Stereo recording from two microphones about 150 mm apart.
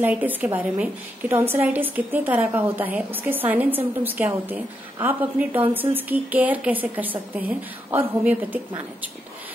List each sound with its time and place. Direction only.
0.0 s a woman's voice: 10° right (ahead or behind)